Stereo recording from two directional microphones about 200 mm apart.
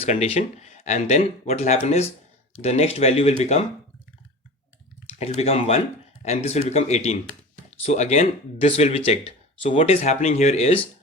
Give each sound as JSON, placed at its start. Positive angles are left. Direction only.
{"t": 0.0, "sound": "speech", "side_deg": 30}
{"t": 5.0, "sound": "speech", "side_deg": 30}